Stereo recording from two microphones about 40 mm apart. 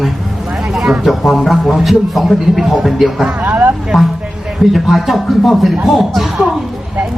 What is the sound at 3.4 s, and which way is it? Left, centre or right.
Vehicle, right.